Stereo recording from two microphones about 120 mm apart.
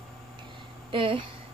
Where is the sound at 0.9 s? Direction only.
45° right (ahead or behind).